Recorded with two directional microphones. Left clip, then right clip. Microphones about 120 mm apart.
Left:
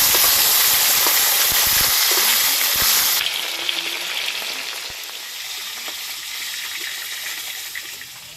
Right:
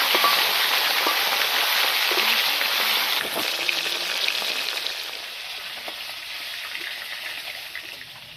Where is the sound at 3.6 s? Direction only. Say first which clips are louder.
Left 1 dB; 25° right (ahead or behind).